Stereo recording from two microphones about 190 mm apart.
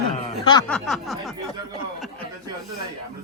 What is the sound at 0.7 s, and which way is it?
Speech, centre (ahead or behind).